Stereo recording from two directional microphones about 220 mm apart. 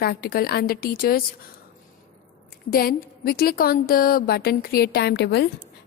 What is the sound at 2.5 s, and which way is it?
A woman's voice, 45° left (ahead or behind).